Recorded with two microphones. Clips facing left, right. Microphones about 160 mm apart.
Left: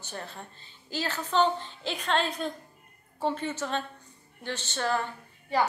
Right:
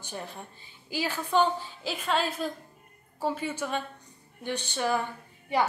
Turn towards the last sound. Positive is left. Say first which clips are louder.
# even
turn(degrees=-15)  # may be behind; listen again after turning